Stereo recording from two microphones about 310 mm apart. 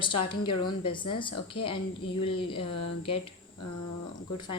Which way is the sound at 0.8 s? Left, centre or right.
Centre.